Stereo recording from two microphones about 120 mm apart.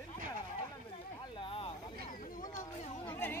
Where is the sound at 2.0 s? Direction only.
90° left.